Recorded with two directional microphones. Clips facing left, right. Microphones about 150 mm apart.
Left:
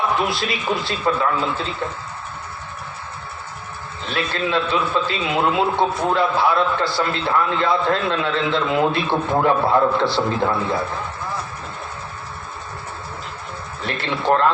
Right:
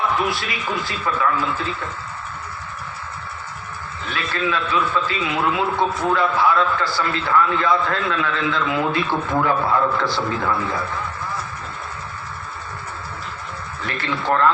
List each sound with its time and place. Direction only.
0.3 s a man's voice: 30° left (ahead or behind)
4.0 s a man's voice: 30° left (ahead or behind)
13.8 s a man's voice: 30° left (ahead or behind)